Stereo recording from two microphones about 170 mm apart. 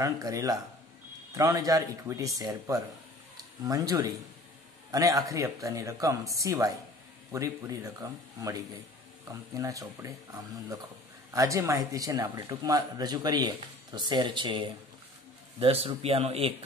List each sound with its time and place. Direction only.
0.0 s speech: 20° right (ahead or behind); by 16.5 s 35° right (ahead or behind)